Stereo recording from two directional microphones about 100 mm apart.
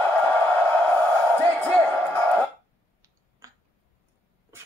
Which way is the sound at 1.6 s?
15° left (ahead or behind).